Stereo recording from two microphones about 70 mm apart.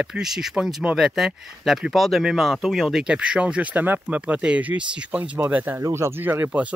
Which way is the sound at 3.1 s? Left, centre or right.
Centre.